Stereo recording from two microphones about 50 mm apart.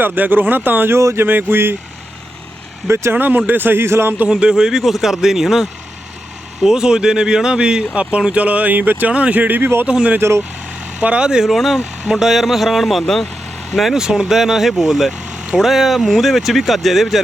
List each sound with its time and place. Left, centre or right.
0.0 s speech: right
0.9 s speech: right
1.2 s speech: right
2.8 s speech: right
3.1 s speech: right
4.3 s speech: centre; by 9.6 s right
9.6 s speech: right
9.8 s speech: right
10.2 s speech: right
11.0 s speech: right
11.4 s speech: centre
13.9 s speech: centre
15.3 s vehicle: right
15.5 s speech: centre